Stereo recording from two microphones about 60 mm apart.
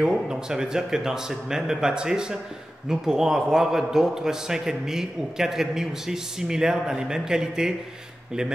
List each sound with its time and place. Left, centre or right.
0.3 s a man's voice: centre